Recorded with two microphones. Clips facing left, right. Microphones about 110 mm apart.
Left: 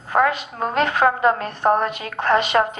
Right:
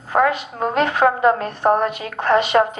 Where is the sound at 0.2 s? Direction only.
15° right (ahead or behind).